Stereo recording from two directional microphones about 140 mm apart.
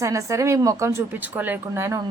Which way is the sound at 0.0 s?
20° right (ahead or behind).